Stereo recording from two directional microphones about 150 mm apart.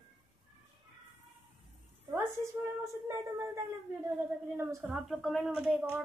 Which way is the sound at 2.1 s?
15° right (ahead or behind).